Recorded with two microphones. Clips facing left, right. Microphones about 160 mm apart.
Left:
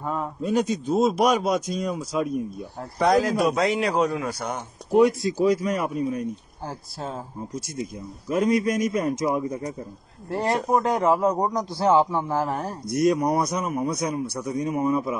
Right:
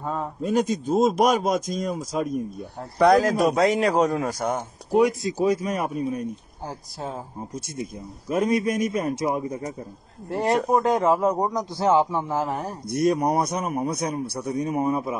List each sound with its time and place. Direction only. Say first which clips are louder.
0.0 s a man's voice: even; 35° right (ahead or behind)
5.0 s a man's voice: left 2 dB; 20° right (ahead or behind)
7.8 s a man's voice: left 1 dB; 30° right (ahead or behind)
12.9 s a man's voice: even; 30° right (ahead or behind)